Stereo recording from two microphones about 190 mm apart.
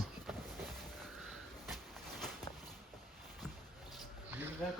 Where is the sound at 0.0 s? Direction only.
Centre (ahead or behind).